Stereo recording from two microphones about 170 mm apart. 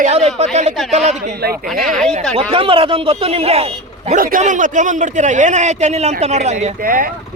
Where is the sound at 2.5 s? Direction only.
30° right (ahead or behind).